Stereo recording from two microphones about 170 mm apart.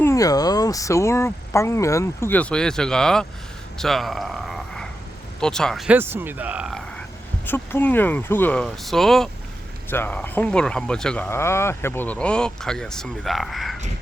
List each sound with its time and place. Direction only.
0.0 s speech: 20° left (ahead or behind); by 6.0 s centre (ahead or behind)
6.0 s speech: 10° right (ahead or behind)
7.4 s speech: 10° left (ahead or behind)